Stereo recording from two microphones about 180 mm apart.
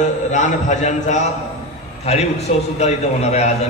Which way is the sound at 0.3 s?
40° left (ahead or behind).